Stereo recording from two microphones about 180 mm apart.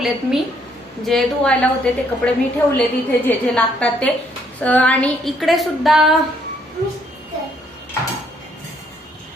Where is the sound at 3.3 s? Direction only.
5° left (ahead or behind).